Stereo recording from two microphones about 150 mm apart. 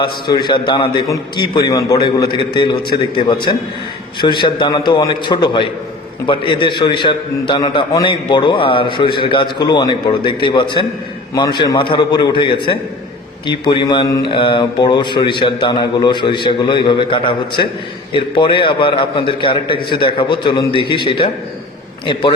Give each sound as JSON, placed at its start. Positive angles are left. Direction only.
{"t": 0.0, "sound": "a man's voice", "side_deg": 30}
{"t": 1.0, "sound": "a man's voice", "side_deg": 20}